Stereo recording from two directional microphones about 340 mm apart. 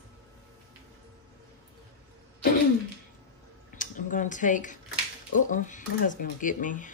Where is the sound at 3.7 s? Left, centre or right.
Left.